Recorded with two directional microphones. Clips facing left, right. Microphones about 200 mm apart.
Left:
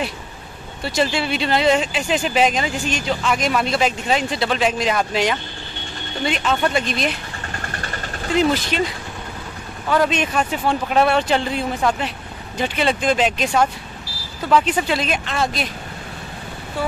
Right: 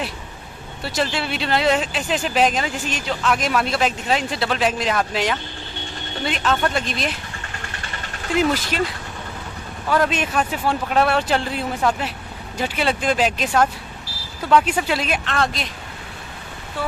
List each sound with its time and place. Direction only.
0.8 s speech: centre (ahead or behind)
7.6 s vehicle: 45° left (ahead or behind)
8.4 s speech: 5° right (ahead or behind)
9.8 s speech: centre (ahead or behind)
14.5 s speech: 5° right (ahead or behind)